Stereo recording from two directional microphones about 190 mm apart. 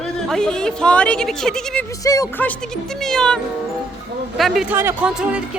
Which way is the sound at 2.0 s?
15° left (ahead or behind).